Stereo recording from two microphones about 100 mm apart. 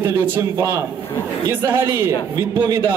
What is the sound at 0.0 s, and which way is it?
A man's voice, 20° right (ahead or behind).